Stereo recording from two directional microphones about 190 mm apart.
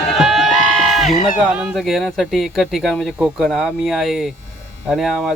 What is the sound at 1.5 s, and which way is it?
Speech, centre (ahead or behind).